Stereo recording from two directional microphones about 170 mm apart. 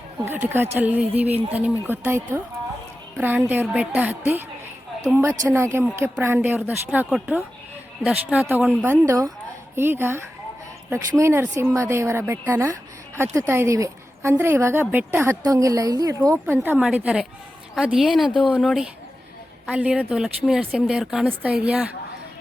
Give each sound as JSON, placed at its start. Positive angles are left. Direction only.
{"t": 0.3, "sound": "a woman's voice", "side_deg": -10}
{"t": 3.2, "sound": "a woman's voice", "side_deg": -10}
{"t": 16.6, "sound": "a woman's voice", "side_deg": -5}